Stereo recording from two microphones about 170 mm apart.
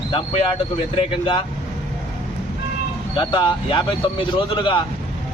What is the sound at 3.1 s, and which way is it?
Speech, 30° left (ahead or behind).